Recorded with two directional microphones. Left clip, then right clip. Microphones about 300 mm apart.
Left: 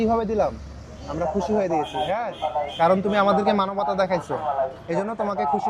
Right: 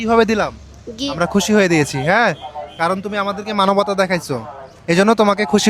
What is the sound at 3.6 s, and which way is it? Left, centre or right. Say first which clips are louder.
Speech: right 7 dB; right.